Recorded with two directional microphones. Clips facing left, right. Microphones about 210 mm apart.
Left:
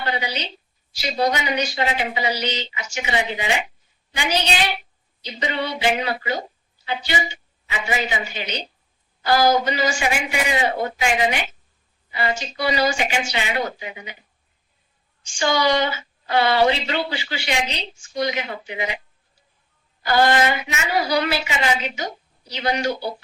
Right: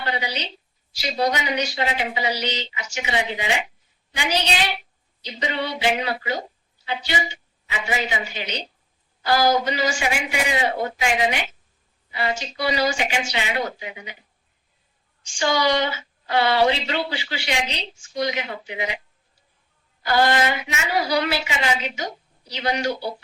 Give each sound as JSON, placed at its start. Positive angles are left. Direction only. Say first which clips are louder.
{"t": 0.0, "sound": "a woman's voice", "louder": "left 1 dB", "side_deg": 50}
{"t": 15.2, "sound": "a woman's voice", "louder": "left 1 dB", "side_deg": 50}
{"t": 20.0, "sound": "a woman's voice", "louder": "left 2 dB", "side_deg": 50}